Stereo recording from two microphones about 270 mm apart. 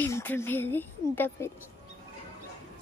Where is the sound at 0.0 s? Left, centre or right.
Centre.